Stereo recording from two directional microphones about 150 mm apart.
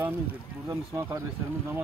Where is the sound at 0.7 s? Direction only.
20° right (ahead or behind).